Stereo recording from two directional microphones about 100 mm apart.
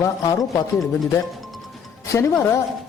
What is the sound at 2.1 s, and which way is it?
Speech, 30° left (ahead or behind).